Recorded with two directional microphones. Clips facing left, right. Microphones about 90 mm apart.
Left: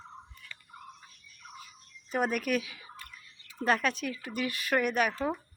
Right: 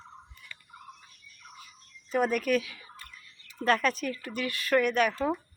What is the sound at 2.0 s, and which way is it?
Speech, 10° left (ahead or behind).